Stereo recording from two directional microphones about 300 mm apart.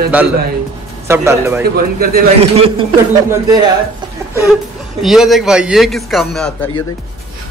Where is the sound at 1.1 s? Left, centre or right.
Centre.